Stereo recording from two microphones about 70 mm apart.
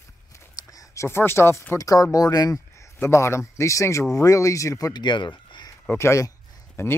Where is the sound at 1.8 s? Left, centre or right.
Left.